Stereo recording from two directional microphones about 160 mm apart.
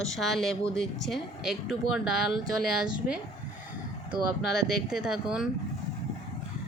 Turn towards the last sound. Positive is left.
turn(degrees=-5)  # may be behind; listen again after turning